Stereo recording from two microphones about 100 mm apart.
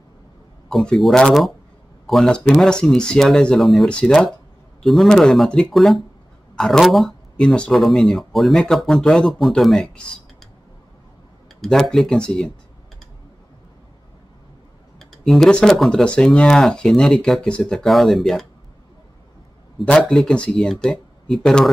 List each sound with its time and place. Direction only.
0.7 s speech: centre (ahead or behind)
11.6 s speech: 5° left (ahead or behind)
15.0 s speech: 5° left (ahead or behind)
19.8 s speech: 10° left (ahead or behind)